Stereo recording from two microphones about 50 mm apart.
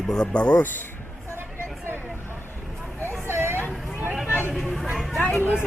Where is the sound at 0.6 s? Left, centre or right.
Left.